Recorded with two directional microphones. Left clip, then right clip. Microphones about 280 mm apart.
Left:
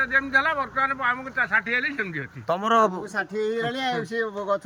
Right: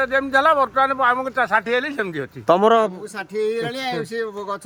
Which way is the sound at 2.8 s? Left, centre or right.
Centre.